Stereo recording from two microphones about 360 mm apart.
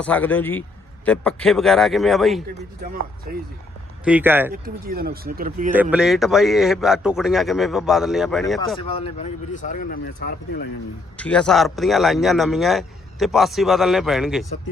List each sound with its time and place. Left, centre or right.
0.0 s a man's voice: centre
2.8 s speech: right
4.0 s a man's voice: centre
4.5 s speech: right
5.7 s a man's voice: centre
8.8 s speech: centre
11.2 s a man's voice: centre